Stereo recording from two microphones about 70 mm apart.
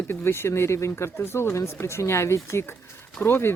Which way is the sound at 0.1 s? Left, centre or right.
Left.